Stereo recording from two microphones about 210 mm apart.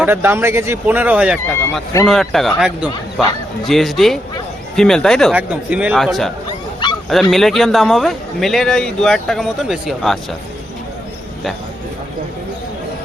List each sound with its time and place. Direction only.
0.0 s a man's voice: 10° right (ahead or behind)